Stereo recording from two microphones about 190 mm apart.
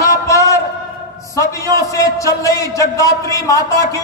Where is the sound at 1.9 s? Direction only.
15° left (ahead or behind).